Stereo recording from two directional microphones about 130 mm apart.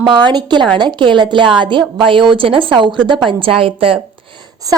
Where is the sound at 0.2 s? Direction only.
35° right (ahead or behind).